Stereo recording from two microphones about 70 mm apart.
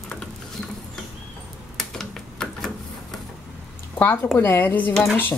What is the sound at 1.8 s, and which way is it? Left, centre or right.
Typewriter, centre.